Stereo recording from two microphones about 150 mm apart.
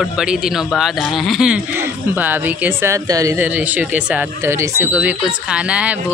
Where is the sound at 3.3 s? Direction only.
10° right (ahead or behind).